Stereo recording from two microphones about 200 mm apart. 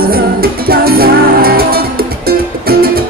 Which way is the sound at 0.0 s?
50° right (ahead or behind).